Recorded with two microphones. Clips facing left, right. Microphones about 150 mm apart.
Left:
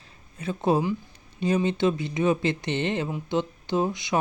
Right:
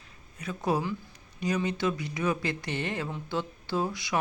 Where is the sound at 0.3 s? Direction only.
25° left (ahead or behind).